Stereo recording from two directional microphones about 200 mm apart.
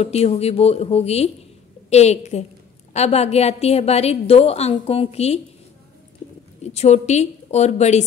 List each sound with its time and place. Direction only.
0.0 s a woman's voice: 30° left (ahead or behind)
6.6 s a woman's voice: 35° left (ahead or behind)